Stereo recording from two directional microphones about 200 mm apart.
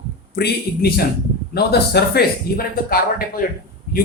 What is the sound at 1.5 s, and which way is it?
Speech, 55° left (ahead or behind).